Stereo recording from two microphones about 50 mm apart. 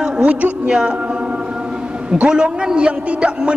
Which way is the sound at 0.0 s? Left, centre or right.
Right.